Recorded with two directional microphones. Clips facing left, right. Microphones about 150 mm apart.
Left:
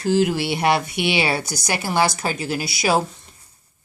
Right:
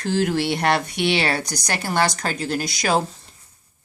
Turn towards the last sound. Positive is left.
turn(degrees=5)  # may be behind; listen again after turning